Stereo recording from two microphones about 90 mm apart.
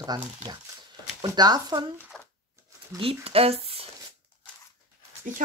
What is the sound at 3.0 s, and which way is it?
Speech, 90° right.